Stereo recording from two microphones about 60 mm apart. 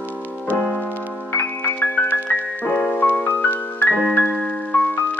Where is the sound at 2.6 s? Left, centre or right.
Left.